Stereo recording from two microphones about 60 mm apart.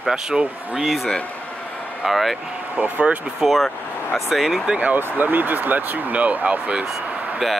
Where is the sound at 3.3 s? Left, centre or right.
Centre.